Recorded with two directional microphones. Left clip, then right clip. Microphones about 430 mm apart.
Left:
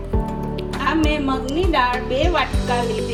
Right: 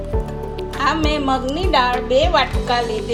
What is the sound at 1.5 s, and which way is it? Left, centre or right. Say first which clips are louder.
Speech: even; centre.